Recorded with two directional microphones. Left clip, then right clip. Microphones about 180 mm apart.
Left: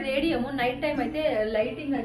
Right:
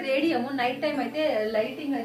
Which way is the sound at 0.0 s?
25° right (ahead or behind).